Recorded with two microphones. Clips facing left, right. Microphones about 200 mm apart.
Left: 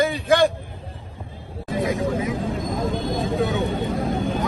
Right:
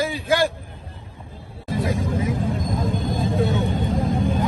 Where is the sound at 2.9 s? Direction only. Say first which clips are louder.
Left 1 dB; 50° left (ahead or behind).